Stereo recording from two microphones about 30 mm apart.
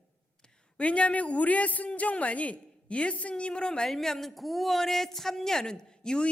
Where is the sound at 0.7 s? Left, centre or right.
Left.